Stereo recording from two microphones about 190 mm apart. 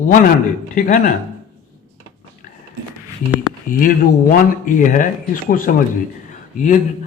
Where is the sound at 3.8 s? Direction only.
45° left (ahead or behind).